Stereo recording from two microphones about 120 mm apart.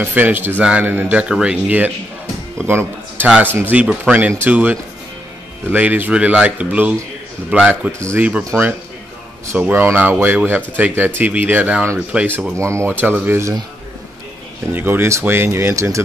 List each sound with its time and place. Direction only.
0.0 s a man's voice: 15° right (ahead or behind)
8.0 s speech: 20° right (ahead or behind)
9.5 s speech: 15° right (ahead or behind)
12.5 s speech: 25° right (ahead or behind)
14.7 s speech: 15° right (ahead or behind)